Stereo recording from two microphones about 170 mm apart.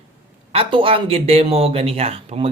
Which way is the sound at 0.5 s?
30° right (ahead or behind).